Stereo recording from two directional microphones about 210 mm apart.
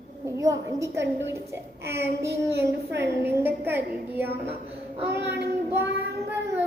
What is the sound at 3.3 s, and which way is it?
A child's voice, 10° right (ahead or behind).